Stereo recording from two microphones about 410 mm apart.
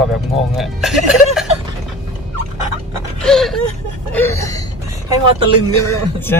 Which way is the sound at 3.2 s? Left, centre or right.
Centre.